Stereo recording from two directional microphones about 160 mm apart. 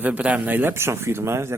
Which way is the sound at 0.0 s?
10° right (ahead or behind).